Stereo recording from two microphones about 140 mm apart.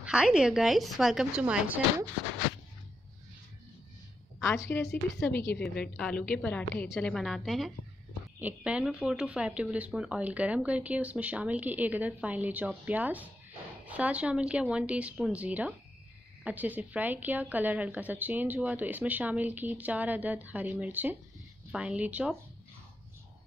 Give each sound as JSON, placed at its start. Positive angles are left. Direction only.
{"t": 0.0, "sound": "speech", "side_deg": -5}
{"t": 4.4, "sound": "a woman's voice", "side_deg": 20}
{"t": 5.6, "sound": "a woman's voice", "side_deg": 5}